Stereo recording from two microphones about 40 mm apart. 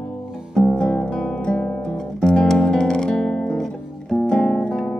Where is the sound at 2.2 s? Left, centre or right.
Left.